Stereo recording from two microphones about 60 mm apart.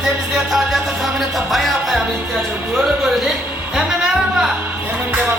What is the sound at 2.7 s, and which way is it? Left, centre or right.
Speech, right.